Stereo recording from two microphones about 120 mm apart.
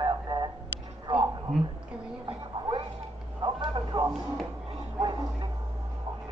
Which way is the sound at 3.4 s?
40° right (ahead or behind).